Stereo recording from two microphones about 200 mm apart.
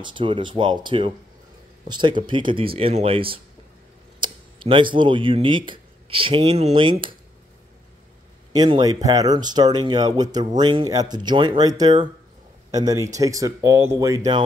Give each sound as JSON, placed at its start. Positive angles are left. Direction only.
{"t": 0.0, "sound": "speech", "side_deg": -25}
{"t": 8.5, "sound": "speech", "side_deg": -20}